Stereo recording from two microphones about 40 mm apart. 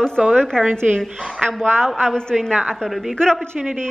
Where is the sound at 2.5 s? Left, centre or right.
Right.